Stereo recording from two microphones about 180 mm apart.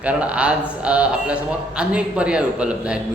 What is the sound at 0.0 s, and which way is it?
A man's voice, 5° right (ahead or behind).